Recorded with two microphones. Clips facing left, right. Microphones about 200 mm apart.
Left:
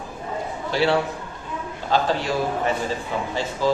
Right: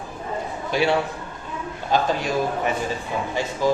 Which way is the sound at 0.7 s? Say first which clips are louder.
Even; 15° right (ahead or behind).